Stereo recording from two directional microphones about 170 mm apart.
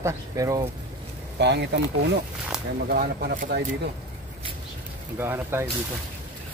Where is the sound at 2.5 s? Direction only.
5° right (ahead or behind).